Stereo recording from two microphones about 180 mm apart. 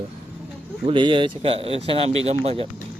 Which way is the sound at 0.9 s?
30° right (ahead or behind).